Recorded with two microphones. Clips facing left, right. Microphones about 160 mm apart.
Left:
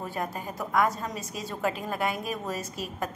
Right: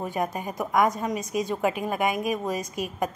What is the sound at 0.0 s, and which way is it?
Speech, 15° right (ahead or behind).